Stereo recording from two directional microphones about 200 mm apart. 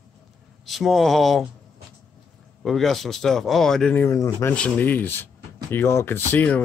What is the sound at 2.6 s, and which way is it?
Speech, centre (ahead or behind).